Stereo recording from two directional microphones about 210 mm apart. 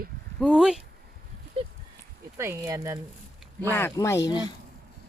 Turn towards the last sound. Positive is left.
turn(degrees=20)  # may be behind; listen again after turning